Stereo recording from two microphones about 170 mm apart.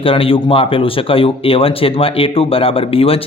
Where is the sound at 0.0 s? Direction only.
30° left (ahead or behind).